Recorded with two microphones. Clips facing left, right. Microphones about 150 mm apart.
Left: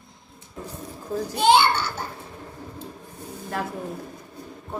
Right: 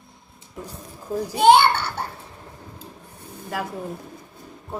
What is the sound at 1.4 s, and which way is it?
Speech, 60° right (ahead or behind).